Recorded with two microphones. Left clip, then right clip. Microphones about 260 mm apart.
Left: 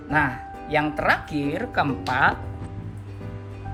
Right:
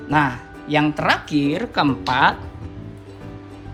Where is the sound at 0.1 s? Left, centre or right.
Centre.